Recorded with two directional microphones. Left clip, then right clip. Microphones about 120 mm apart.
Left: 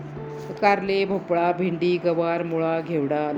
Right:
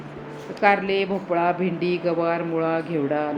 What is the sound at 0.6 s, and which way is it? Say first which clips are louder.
A woman's voice: right 1 dB; 35° left (ahead or behind).